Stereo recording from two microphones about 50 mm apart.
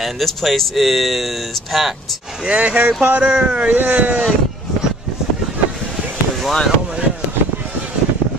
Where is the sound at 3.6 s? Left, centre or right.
Right.